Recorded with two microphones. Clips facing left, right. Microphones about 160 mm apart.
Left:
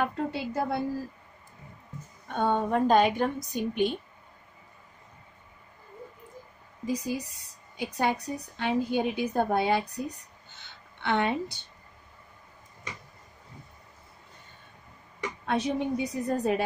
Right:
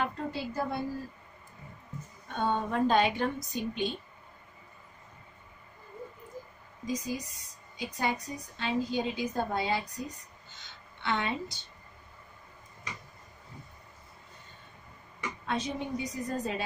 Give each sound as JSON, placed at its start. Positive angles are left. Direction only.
{"t": 0.0, "sound": "a woman's voice", "side_deg": 65}
{"t": 2.2, "sound": "a woman's voice", "side_deg": 50}
{"t": 3.5, "sound": "speech", "side_deg": 55}
{"t": 6.9, "sound": "a woman's voice", "side_deg": 65}
{"t": 15.1, "sound": "speech", "side_deg": 65}